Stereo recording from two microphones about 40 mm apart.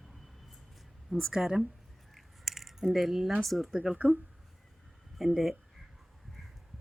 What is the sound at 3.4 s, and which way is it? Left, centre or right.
Speech, centre.